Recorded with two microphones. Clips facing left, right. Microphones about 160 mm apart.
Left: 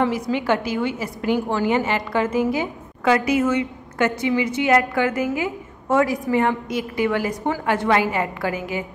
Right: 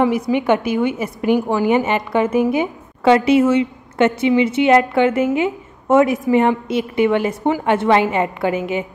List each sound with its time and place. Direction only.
0.0 s a woman's voice: 15° right (ahead or behind)